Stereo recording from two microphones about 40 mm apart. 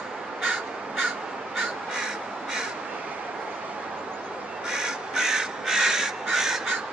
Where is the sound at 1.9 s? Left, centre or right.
Centre.